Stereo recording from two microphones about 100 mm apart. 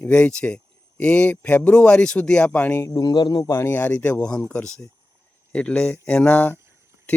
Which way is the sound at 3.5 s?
25° left (ahead or behind).